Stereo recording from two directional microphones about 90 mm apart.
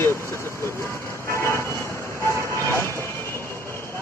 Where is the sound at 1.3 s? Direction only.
30° left (ahead or behind).